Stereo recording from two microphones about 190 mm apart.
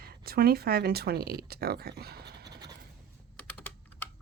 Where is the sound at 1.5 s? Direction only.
55° right (ahead or behind).